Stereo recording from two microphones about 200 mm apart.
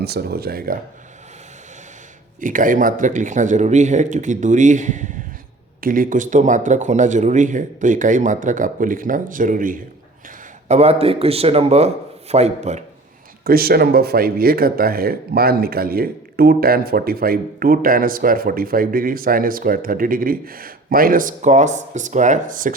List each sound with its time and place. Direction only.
0.0 s speech: 50° right (ahead or behind)
2.4 s speech: 40° right (ahead or behind)
13.4 s speech: 50° right (ahead or behind)